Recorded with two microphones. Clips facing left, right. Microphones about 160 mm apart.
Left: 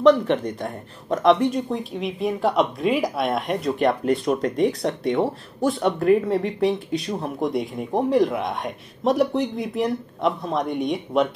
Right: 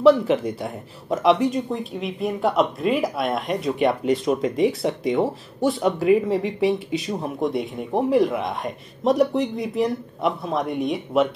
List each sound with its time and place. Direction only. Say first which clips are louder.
0.0 s speech: right 1 dB; 5° right (ahead or behind)